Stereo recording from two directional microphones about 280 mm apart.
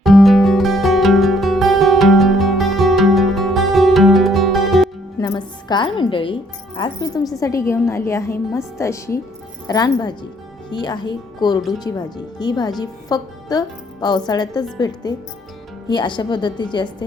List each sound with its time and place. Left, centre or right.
0.0 s music: centre
5.2 s music: centre
6.7 s a woman's voice: centre